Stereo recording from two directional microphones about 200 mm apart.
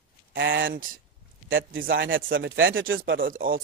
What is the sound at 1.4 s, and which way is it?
Speech, 75° right (ahead or behind).